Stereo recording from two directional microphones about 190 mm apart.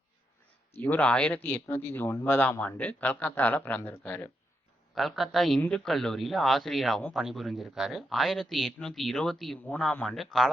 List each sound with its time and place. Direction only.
0.8 s a man's voice: 10° left (ahead or behind)